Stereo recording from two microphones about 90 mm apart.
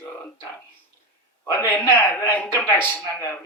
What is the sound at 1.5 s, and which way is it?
A man's voice, 25° left (ahead or behind).